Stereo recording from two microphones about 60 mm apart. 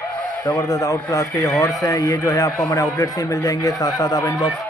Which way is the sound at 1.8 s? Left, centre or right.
Left.